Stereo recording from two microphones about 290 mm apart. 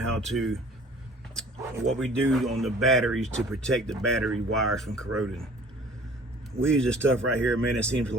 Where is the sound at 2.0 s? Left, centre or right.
Centre.